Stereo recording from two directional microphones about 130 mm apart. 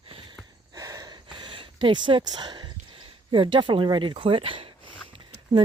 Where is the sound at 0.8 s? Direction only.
25° right (ahead or behind).